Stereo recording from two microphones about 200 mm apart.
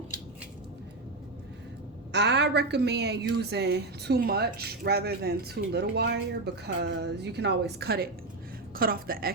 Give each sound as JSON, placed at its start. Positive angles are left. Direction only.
{"t": 2.1, "sound": "a woman's voice", "side_deg": -60}